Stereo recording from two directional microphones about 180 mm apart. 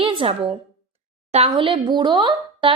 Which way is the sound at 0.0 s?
30° right (ahead or behind).